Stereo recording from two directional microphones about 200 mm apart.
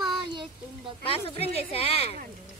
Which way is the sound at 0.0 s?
25° right (ahead or behind).